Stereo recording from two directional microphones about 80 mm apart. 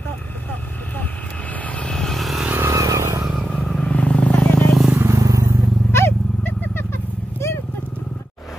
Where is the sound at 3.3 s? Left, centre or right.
Centre.